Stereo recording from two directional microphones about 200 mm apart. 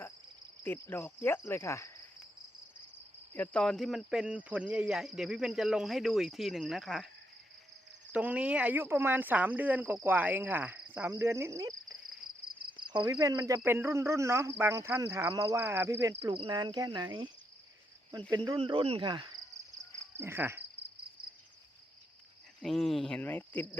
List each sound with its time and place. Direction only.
0.6 s cricket: 10° left (ahead or behind)
3.3 s speech: 5° left (ahead or behind)
8.1 s speech: 5° right (ahead or behind)
16.2 s speech: 25° right (ahead or behind)
18.3 s speech: 20° right (ahead or behind)
20.1 s cricket: 10° right (ahead or behind)
22.6 s speech: centre (ahead or behind)